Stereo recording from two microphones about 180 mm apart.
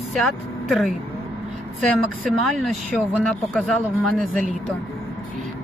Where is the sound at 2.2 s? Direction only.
Centre (ahead or behind).